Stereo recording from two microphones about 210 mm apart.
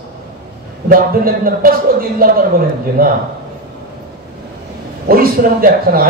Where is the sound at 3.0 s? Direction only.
45° right (ahead or behind).